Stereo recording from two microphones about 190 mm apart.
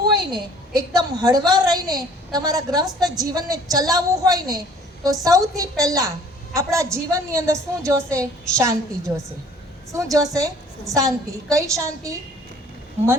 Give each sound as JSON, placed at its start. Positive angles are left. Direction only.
{"t": 0.3, "sound": "a woman's voice", "side_deg": -20}